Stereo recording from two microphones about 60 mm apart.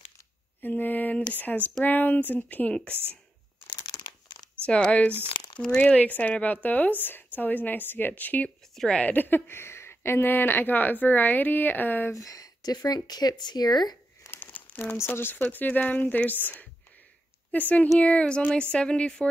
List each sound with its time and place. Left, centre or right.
0.6 s a woman's voice: left
2.9 s speech: right
3.9 s crumpling: left
4.6 s a woman's voice: left
8.7 s a woman's voice: centre
9.0 s speech: left
12.1 s speech: left
14.3 s crumpling: left
15.0 s speech: left
15.5 s a woman's voice: left